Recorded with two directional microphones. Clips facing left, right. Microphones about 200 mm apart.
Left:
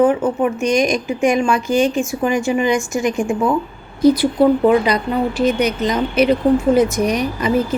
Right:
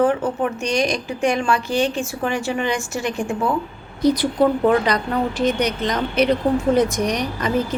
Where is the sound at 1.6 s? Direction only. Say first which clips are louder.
Left 5 dB; 45° left (ahead or behind).